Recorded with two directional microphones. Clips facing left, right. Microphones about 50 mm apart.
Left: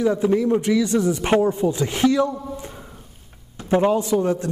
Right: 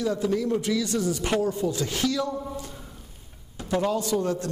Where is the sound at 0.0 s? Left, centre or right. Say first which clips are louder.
Left 6 dB; left.